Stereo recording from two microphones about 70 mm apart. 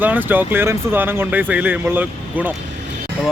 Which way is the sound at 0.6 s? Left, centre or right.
Right.